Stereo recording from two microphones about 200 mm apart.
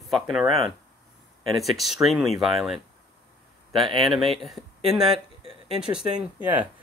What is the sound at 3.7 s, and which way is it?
Speech, 25° right (ahead or behind).